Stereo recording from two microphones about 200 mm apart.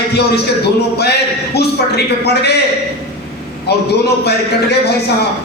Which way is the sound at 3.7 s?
55° left (ahead or behind).